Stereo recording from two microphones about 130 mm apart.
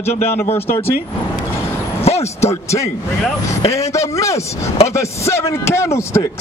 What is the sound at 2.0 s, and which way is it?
Speech, 55° left (ahead or behind).